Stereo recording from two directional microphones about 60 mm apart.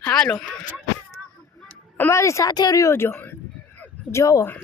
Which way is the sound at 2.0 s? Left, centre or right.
Left.